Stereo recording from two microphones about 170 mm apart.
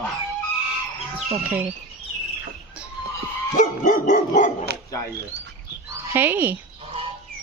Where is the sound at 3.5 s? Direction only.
45° left (ahead or behind).